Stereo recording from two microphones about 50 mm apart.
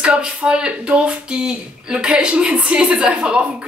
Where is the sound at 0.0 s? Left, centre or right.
Centre.